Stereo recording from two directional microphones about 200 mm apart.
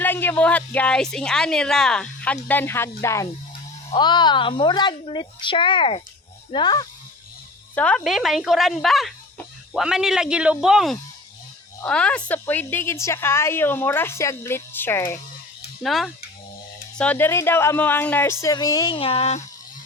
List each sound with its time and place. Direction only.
0.0 s a woman's voice: 10° left (ahead or behind)
7.8 s a woman's voice: 5° left (ahead or behind)
15.8 s a woman's voice: centre (ahead or behind); by 19.5 s 35° left (ahead or behind)